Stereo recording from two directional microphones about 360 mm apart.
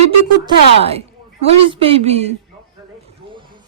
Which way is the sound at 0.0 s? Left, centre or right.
Centre.